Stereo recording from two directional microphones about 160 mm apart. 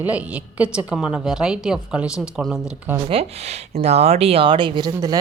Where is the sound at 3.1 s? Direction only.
40° right (ahead or behind).